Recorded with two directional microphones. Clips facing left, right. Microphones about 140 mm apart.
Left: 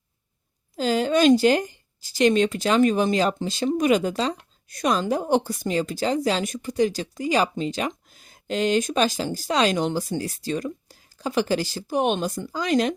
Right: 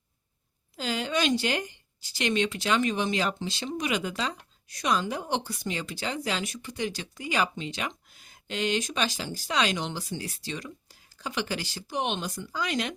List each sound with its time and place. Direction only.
0.8 s a woman's voice: 40° left (ahead or behind)